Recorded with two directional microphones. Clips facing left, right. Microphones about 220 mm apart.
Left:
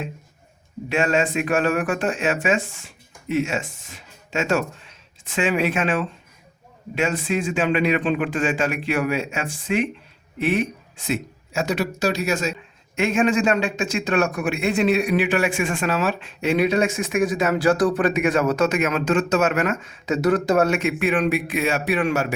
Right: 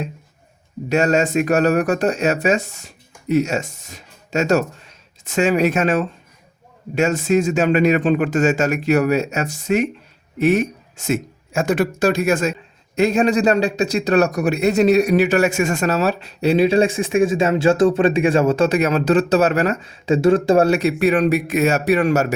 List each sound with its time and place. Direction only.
0.9 s a man's voice: 40° right (ahead or behind)
13.0 s a man's voice: 35° right (ahead or behind)